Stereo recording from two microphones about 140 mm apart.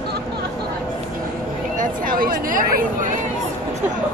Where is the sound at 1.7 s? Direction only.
90° right.